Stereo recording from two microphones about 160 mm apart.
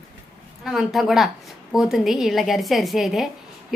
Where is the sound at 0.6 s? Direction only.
Centre (ahead or behind).